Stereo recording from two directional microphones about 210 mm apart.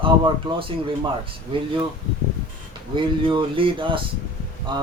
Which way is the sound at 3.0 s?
25° right (ahead or behind).